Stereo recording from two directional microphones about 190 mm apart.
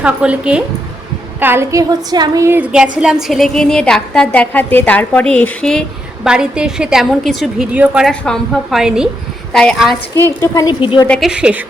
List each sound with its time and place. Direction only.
0.0 s a woman's voice: 5° right (ahead or behind)
10.2 s a woman's voice: 15° left (ahead or behind)
11.1 s a woman's voice: 5° right (ahead or behind)